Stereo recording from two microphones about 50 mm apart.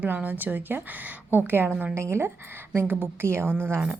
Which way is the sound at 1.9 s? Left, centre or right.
Right.